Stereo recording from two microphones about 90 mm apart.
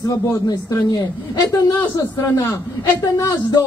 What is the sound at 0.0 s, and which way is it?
Speech, 40° left (ahead or behind).